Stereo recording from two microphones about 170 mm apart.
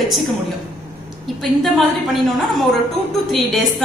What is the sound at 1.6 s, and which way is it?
A woman's voice, centre (ahead or behind).